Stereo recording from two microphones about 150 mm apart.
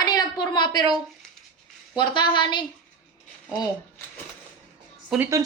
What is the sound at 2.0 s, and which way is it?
Speech, 30° left (ahead or behind).